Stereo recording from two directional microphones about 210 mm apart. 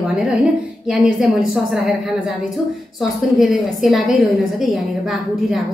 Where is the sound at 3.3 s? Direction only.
Centre (ahead or behind).